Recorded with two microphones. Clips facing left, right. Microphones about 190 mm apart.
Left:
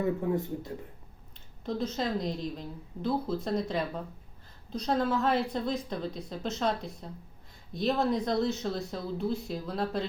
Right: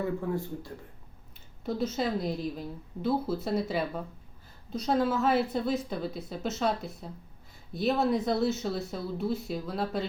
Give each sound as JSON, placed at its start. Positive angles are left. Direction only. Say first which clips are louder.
{"t": 0.0, "sound": "speech", "louder": "left 2 dB", "side_deg": 20}
{"t": 1.6, "sound": "a woman's voice", "louder": "right 2 dB", "side_deg": -5}